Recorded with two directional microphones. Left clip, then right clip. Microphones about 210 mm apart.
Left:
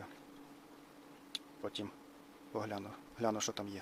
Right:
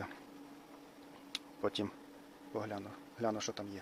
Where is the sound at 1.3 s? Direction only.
20° right (ahead or behind).